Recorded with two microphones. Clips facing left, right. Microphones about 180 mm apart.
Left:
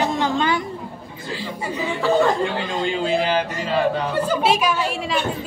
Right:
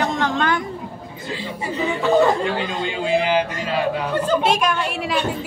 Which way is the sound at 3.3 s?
10° right (ahead or behind).